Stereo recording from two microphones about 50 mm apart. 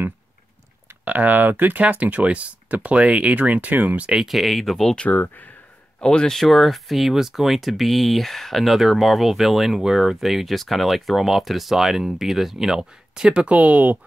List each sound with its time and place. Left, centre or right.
1.0 s speech: right
4.3 s speech: centre
5.1 s speech: left
5.9 s speech: centre; by 13.9 s right